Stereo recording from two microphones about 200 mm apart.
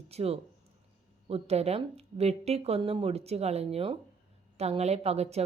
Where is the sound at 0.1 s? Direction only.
30° right (ahead or behind).